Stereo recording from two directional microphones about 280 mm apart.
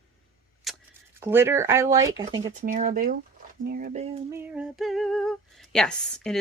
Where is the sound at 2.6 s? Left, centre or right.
Right.